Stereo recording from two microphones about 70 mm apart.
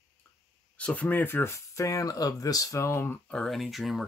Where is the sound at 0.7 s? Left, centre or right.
Centre.